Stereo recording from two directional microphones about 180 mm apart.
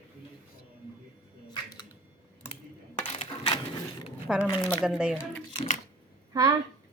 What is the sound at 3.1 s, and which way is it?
Coin, 35° left (ahead or behind).